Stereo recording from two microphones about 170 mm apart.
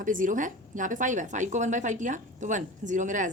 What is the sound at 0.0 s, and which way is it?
A woman's voice, 50° right (ahead or behind).